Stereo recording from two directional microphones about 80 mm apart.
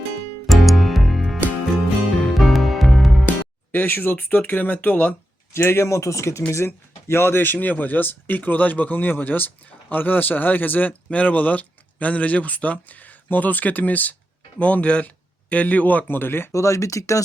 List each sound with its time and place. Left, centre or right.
0.4 s music: centre
3.2 s speech: left
5.5 s speech: left
16.5 s speech: left